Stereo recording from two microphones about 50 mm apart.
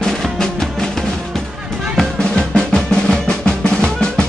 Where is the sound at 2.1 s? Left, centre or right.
Centre.